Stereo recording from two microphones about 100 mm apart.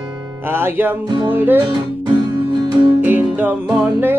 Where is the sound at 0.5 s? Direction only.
20° right (ahead or behind).